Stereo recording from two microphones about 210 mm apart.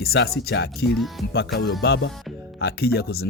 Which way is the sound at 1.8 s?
55° left (ahead or behind).